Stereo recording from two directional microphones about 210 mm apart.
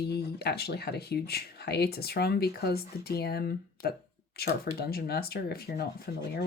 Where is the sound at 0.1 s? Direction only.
50° left (ahead or behind).